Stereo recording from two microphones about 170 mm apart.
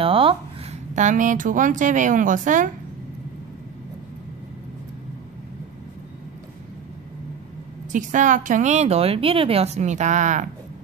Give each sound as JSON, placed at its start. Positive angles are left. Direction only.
{"t": 0.0, "sound": "a sound", "side_deg": -30}
{"t": 0.9, "sound": "a woman's voice", "side_deg": -45}
{"t": 7.9, "sound": "a woman's voice", "side_deg": -50}